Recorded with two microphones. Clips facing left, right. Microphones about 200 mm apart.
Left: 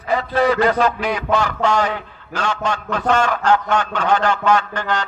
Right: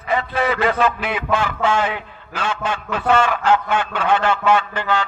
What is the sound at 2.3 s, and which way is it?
Speech, 40° left (ahead or behind).